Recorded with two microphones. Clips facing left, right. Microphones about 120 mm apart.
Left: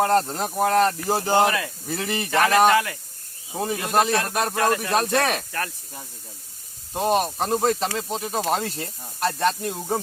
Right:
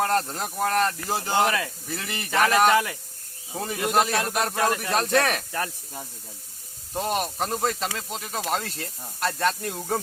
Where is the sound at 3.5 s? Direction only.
25° left (ahead or behind).